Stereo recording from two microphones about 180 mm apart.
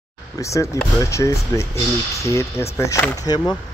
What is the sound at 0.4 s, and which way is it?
Speech, 15° left (ahead or behind).